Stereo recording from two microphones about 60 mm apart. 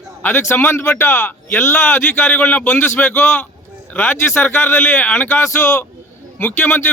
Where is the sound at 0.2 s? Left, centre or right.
Left.